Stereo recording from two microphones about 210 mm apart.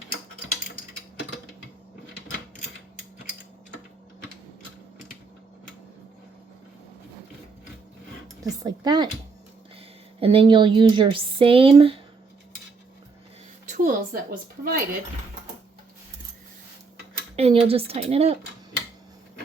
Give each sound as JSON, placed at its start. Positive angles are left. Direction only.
{"t": 8.4, "sound": "speech", "side_deg": -20}
{"t": 10.2, "sound": "speech", "side_deg": -25}
{"t": 13.7, "sound": "speech", "side_deg": -35}
{"t": 17.3, "sound": "speech", "side_deg": -30}